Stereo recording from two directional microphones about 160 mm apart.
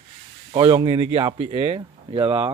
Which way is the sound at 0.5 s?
35° right (ahead or behind).